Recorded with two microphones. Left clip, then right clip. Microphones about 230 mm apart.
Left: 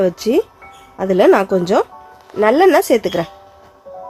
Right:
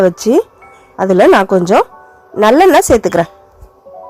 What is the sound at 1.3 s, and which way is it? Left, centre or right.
Speech, centre.